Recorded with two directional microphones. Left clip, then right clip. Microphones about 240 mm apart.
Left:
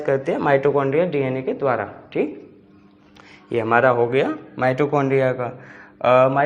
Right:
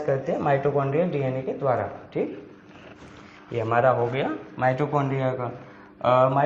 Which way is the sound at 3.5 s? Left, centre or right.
Left.